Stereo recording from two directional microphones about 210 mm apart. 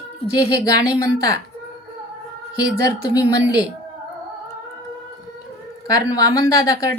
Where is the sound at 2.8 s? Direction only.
15° left (ahead or behind).